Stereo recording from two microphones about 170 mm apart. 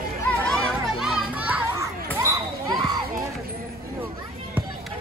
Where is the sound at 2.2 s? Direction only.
20° right (ahead or behind).